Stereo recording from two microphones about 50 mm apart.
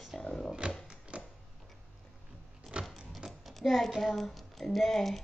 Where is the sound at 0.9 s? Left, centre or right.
Right.